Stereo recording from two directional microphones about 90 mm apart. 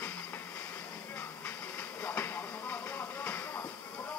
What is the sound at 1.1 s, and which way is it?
Train, 25° left (ahead or behind).